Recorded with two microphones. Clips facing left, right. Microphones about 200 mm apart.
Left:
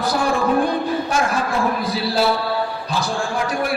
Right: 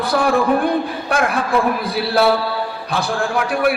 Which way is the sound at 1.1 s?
60° right (ahead or behind).